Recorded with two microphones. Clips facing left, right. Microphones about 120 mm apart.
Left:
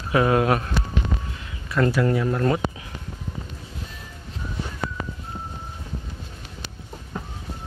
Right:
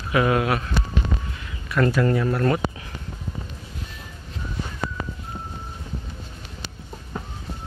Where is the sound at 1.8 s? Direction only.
10° left (ahead or behind).